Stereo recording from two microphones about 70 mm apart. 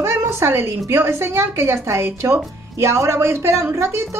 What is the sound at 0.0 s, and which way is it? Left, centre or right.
A woman's voice, right.